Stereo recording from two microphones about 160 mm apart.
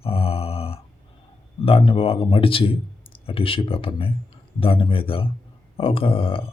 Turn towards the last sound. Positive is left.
turn(degrees=35)  # may be behind; listen again after turning